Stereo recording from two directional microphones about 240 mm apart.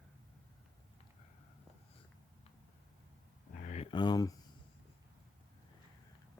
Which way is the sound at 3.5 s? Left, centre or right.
Left.